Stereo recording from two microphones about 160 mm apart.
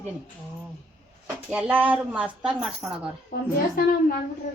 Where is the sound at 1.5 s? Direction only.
10° right (ahead or behind).